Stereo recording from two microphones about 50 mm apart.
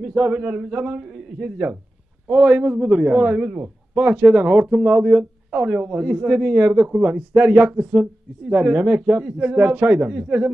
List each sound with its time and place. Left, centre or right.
0.1 s speech: right
1.0 s a man's voice: centre
1.6 s speech: right